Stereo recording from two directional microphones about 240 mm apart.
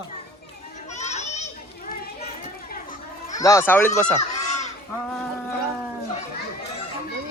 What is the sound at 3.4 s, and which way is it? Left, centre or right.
Speech, centre.